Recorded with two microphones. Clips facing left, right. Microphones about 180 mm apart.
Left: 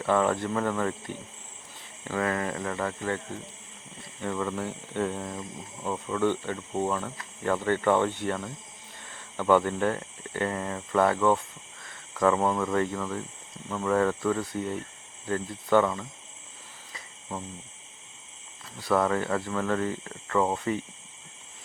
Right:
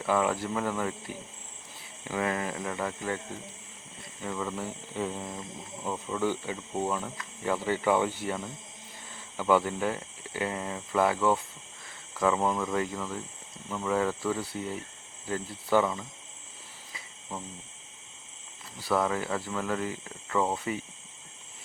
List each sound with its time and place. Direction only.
0.0 s speech: 5° right (ahead or behind)
4.2 s speech: 5° right (ahead or behind)
18.8 s speech: 5° right (ahead or behind)